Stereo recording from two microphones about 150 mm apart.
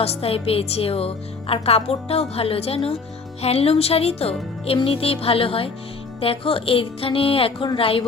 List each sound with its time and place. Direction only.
0.0 s a woman's voice: 40° left (ahead or behind)